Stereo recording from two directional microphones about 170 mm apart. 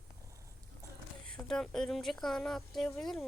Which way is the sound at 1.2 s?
5° left (ahead or behind).